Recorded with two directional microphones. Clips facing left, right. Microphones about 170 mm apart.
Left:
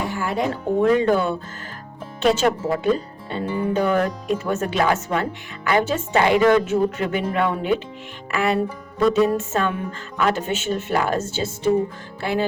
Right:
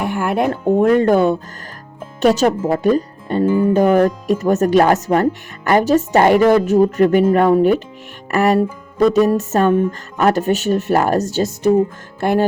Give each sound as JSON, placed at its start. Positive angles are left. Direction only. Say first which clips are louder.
{"t": 0.0, "sound": "speech", "louder": "right 6 dB", "side_deg": -60}
{"t": 8.3, "sound": "music", "louder": "right 6 dB", "side_deg": -45}
{"t": 9.1, "sound": "a woman's voice", "louder": "right 5 dB", "side_deg": -40}
{"t": 12.2, "sound": "speech", "louder": "right 7 dB", "side_deg": -55}